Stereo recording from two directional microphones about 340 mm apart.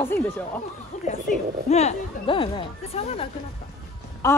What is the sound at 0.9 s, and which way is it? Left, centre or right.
A woman's voice, left.